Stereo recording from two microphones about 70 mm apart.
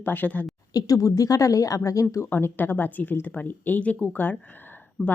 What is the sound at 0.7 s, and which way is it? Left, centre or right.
A woman's voice, left.